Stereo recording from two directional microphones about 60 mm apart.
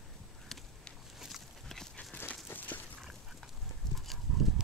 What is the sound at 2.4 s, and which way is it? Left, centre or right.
Dog, left.